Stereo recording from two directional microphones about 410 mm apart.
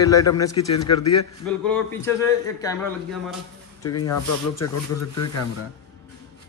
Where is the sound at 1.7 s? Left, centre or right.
Centre.